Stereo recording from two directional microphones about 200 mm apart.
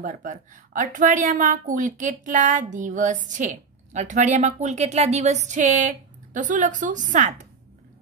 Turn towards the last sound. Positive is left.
turn(degrees=-40)  # may be behind; listen again after turning